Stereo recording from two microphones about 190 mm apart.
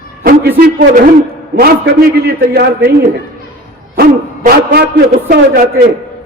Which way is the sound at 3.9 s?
50° right (ahead or behind).